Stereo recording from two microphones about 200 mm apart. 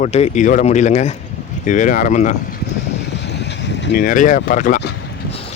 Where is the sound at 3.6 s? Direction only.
60° left (ahead or behind).